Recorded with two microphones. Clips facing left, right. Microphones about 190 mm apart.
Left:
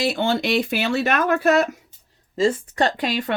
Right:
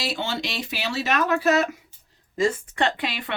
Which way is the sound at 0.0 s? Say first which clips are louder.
Left 7 dB; 55° left (ahead or behind).